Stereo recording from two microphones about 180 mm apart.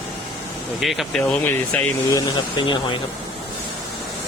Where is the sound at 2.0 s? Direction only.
20° left (ahead or behind).